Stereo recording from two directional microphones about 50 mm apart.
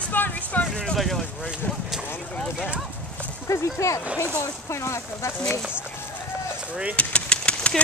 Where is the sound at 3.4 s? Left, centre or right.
Left.